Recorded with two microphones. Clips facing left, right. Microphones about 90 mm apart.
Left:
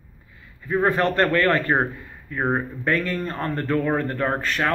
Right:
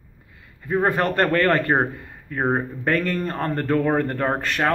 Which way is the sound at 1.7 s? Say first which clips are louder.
Right 1 dB; 15° right (ahead or behind).